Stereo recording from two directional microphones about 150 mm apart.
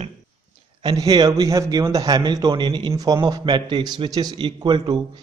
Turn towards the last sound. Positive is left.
turn(degrees=-30)  # may be behind; listen again after turning